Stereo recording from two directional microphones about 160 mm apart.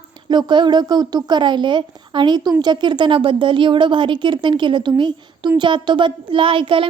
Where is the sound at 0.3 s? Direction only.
30° right (ahead or behind).